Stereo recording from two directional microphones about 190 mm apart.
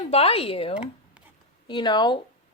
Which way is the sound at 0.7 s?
5° right (ahead or behind).